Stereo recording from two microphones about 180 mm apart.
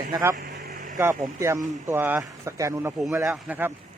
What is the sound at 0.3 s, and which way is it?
Vehicle, 45° right (ahead or behind).